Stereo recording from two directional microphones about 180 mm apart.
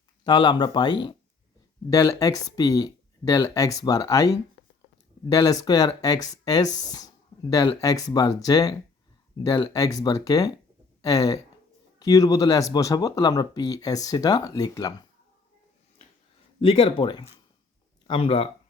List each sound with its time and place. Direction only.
0.3 s speech: 25° left (ahead or behind)
16.6 s speech: 30° left (ahead or behind)